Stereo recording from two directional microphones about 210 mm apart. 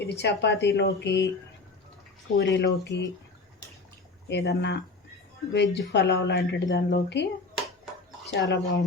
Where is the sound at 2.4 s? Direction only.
55° left (ahead or behind).